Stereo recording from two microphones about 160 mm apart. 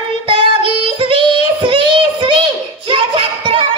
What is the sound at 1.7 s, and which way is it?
Child singing, 30° right (ahead or behind).